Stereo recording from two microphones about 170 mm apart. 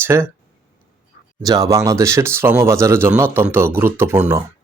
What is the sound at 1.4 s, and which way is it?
Speech, 20° right (ahead or behind).